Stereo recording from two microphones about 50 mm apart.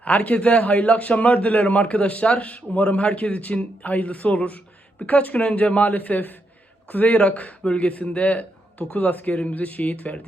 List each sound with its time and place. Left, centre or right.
0.0 s a man's voice: left